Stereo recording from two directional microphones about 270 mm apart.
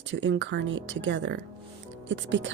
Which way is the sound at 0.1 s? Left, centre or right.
Right.